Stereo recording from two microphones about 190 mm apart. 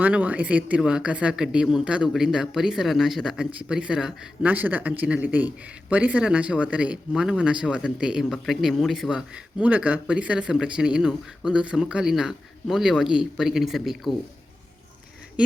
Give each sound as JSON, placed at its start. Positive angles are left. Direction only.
{"t": 0.0, "sound": "speech", "side_deg": -5}